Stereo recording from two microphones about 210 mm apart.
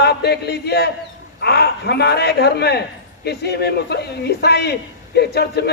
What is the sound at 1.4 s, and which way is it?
A man's voice, 50° left (ahead or behind).